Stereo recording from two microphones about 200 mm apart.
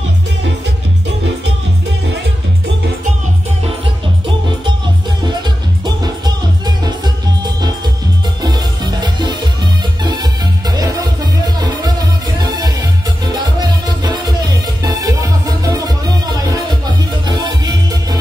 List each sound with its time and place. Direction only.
5.9 s music: 20° right (ahead or behind)
8.4 s music: 20° right (ahead or behind)